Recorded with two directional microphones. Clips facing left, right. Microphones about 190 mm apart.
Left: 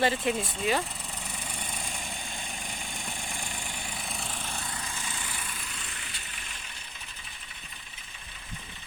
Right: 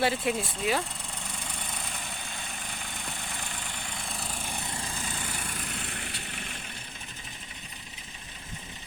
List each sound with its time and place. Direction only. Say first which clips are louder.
0.0 s speech: even; 5° right (ahead or behind)
1.5 s vehicle: left 2 dB; 10° left (ahead or behind); by 4.6 s 10° right (ahead or behind)
4.6 s vehicle: right 2 dB; 25° right (ahead or behind); by 6.6 s 60° right (ahead or behind)